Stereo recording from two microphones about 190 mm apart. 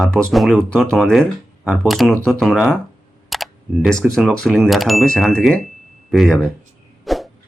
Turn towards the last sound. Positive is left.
turn(degrees=0)  # may be behind; listen again after turning